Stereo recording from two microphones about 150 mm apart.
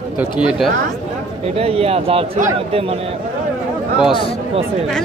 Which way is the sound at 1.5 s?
40° right (ahead or behind).